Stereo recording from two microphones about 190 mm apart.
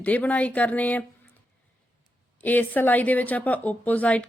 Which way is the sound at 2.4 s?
10° left (ahead or behind).